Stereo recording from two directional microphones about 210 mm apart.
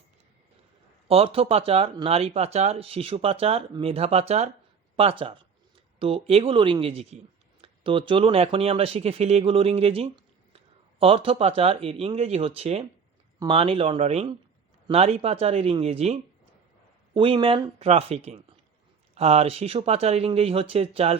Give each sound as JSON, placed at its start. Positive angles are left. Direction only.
{"t": 1.0, "sound": "speech", "side_deg": -25}